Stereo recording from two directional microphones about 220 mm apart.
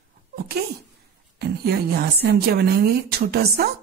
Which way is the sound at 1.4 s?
45° right (ahead or behind).